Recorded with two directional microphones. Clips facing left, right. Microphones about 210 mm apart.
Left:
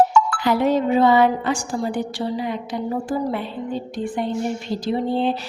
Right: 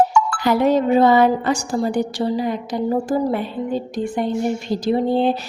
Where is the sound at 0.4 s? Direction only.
40° right (ahead or behind).